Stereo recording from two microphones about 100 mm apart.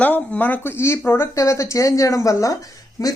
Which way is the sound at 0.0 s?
15° left (ahead or behind).